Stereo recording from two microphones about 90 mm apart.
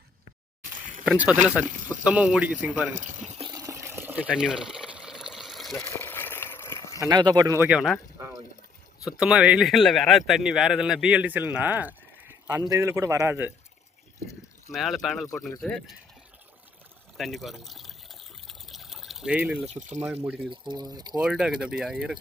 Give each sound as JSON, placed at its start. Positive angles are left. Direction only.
{"t": 1.0, "sound": "a man's voice", "side_deg": -15}
{"t": 3.5, "sound": "water", "side_deg": -40}
{"t": 5.8, "sound": "a sound", "side_deg": 25}
{"t": 7.1, "sound": "speech", "side_deg": -55}
{"t": 7.7, "sound": "speech", "side_deg": -5}
{"t": 9.1, "sound": "a man's voice", "side_deg": -10}
{"t": 9.6, "sound": "a man's voice", "side_deg": 0}
{"t": 12.5, "sound": "speech", "side_deg": -40}
{"t": 14.7, "sound": "speech", "side_deg": 0}
{"t": 17.2, "sound": "water", "side_deg": 0}
{"t": 19.3, "sound": "a man's voice", "side_deg": -15}
{"t": 20.5, "sound": "speech", "side_deg": -55}
{"t": 21.1, "sound": "a man's voice", "side_deg": -5}